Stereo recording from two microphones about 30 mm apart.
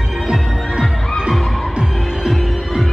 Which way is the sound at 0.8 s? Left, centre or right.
Centre.